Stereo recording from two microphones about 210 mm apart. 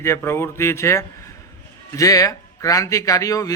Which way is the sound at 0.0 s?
10° left (ahead or behind).